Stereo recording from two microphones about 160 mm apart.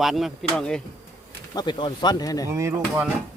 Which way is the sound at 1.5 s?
30° left (ahead or behind).